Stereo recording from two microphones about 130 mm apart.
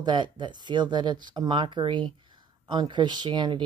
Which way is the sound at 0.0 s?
35° right (ahead or behind).